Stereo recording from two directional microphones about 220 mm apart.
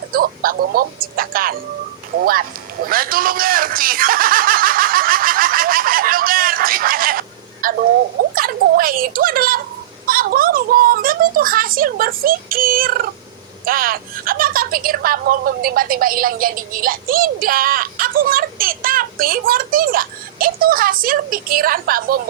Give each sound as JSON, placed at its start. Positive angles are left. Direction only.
{"t": 0.1, "sound": "music", "side_deg": -40}
{"t": 2.8, "sound": "snicker", "side_deg": -40}
{"t": 8.4, "sound": "a woman's voice", "side_deg": -40}